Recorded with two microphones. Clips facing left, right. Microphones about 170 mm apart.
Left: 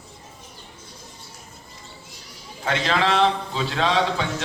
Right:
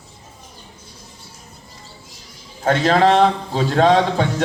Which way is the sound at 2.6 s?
45° right (ahead or behind).